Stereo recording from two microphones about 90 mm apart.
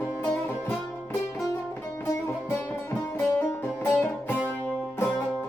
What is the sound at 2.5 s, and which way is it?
Music, 25° left (ahead or behind).